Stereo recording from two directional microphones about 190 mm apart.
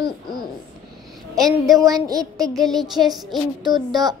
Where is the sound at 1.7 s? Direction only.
20° right (ahead or behind).